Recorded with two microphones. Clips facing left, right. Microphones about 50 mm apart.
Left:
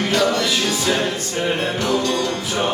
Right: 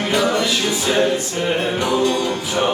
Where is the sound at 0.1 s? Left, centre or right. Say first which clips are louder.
Right 2 dB; centre.